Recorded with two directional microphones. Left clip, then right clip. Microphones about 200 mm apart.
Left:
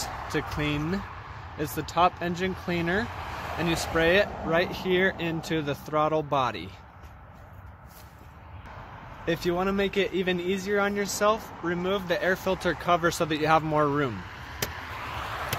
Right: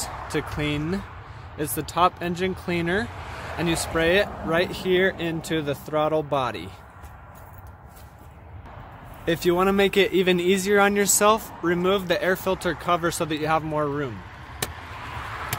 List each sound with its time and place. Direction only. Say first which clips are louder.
0.0 s vehicle: right 1 dB; 60° left (ahead or behind)
1.8 s speech: right 2 dB; 5° right (ahead or behind)
3.1 s vehicle: left 1 dB; 40° left (ahead or behind)
3.7 s speech: right 1 dB; centre (ahead or behind)
9.2 s speech: right 6 dB; 20° right (ahead or behind)
12.2 s speech: right 3 dB; 10° right (ahead or behind); by 13.7 s 10° left (ahead or behind)
13.7 s chop: left 1 dB; 25° left (ahead or behind); by 15.5 s 50° left (ahead or behind)